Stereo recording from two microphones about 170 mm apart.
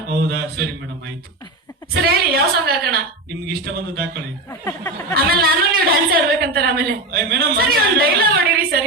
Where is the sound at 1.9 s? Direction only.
70° right (ahead or behind).